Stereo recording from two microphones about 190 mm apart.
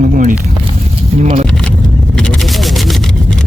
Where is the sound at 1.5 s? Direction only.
5° left (ahead or behind).